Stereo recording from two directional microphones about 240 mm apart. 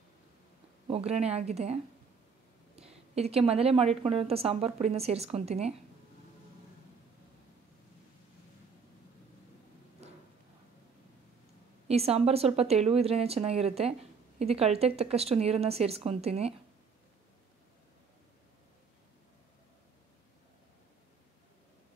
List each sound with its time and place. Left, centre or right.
0.8 s a woman's voice: right
11.9 s a woman's voice: right